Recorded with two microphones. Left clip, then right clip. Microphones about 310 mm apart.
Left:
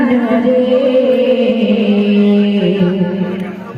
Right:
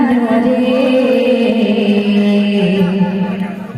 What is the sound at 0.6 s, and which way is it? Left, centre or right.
Music, right.